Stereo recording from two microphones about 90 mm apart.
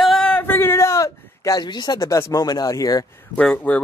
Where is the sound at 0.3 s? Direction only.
20° left (ahead or behind); by 2.0 s 50° left (ahead or behind).